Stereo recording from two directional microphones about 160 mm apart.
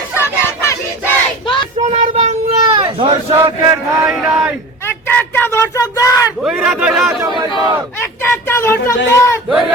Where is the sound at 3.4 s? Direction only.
20° right (ahead or behind).